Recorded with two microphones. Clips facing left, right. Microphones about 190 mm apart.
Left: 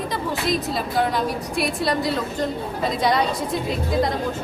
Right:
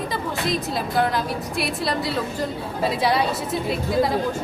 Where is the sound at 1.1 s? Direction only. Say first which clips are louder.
Left 1 dB; centre (ahead or behind).